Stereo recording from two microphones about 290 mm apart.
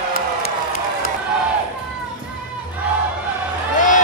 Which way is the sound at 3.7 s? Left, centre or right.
Left.